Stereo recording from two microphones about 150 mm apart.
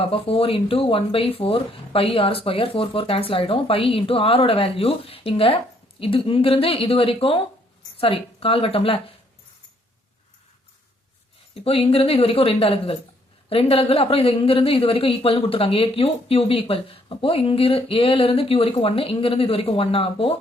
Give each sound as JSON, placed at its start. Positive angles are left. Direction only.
{"t": 0.0, "sound": "speech", "side_deg": 40}
{"t": 11.5, "sound": "speech", "side_deg": 40}